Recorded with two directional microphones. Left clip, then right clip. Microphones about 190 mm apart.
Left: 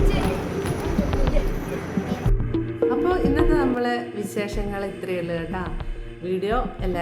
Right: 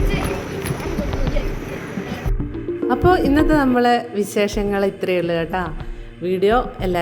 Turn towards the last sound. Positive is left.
turn(degrees=-40)  # may be behind; listen again after turning